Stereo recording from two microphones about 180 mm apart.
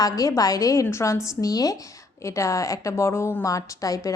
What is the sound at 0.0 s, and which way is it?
A woman's voice, 20° left (ahead or behind).